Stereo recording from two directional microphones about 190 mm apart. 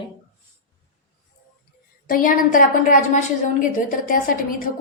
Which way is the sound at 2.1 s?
45° left (ahead or behind).